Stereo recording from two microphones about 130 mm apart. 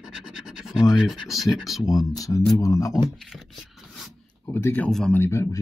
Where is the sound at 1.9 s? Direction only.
30° left (ahead or behind).